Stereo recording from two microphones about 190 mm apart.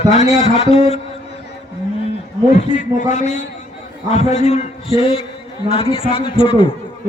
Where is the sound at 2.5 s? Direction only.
40° left (ahead or behind).